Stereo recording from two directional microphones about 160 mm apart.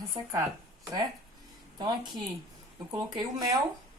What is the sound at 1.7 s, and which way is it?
Speech, 25° right (ahead or behind).